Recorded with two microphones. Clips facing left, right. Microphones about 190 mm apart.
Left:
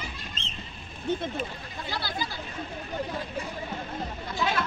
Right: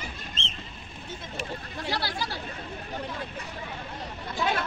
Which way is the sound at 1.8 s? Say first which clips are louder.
Right 1 dB; 75° right (ahead or behind).